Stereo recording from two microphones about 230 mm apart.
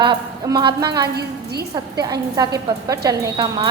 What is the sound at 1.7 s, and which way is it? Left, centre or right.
A woman's voice, centre.